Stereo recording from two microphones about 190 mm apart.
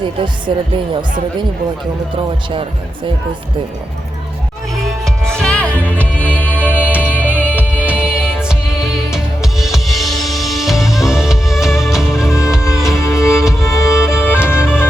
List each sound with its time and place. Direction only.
0.0 s speech: 25° right (ahead or behind)
2.5 s speech: 25° right (ahead or behind)
5.3 s music: 5° left (ahead or behind)
5.7 s music: 10° right (ahead or behind)
6.2 s music: 10° left (ahead or behind)
6.9 s music: 10° right (ahead or behind)
12.6 s music: 15° left (ahead or behind)
13.7 s music: 5° right (ahead or behind)
14.4 s music: 10° left (ahead or behind)